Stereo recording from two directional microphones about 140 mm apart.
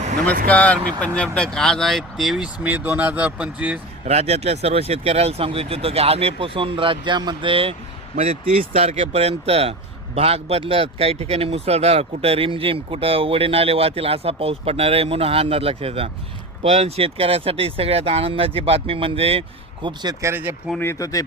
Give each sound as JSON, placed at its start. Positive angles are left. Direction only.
{"t": 0.4, "sound": "speech", "side_deg": 10}
{"t": 4.0, "sound": "speech", "side_deg": -50}
{"t": 8.1, "sound": "speech", "side_deg": -50}
{"t": 20.3, "sound": "speech", "side_deg": -15}
{"t": 20.7, "sound": "speech", "side_deg": 20}